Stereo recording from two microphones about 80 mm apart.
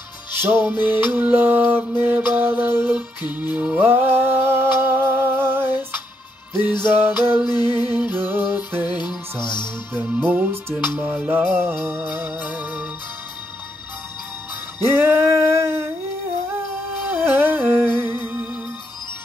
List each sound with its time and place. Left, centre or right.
0.3 s music: right
6.5 s music: left
6.8 s music: right
7.4 s music: left
8.3 s music: right
8.8 s music: left
9.9 s music: centre
15.0 s humming: right
17.1 s music: right